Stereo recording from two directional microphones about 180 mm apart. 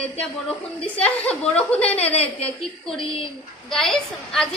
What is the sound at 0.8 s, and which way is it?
A woman's voice, 5° left (ahead or behind).